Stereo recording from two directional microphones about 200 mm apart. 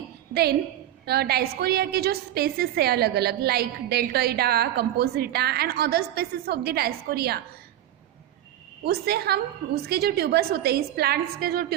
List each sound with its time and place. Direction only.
1.0 s a woman's voice: 50° right (ahead or behind)
8.8 s a woman's voice: 50° right (ahead or behind)